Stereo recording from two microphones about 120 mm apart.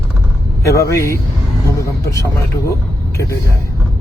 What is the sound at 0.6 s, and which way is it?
Speech, 25° left (ahead or behind).